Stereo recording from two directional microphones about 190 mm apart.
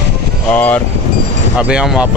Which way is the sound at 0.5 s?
10° left (ahead or behind).